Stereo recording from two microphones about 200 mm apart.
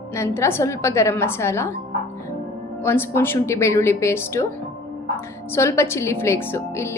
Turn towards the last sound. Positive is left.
turn(degrees=15)  # may be behind; listen again after turning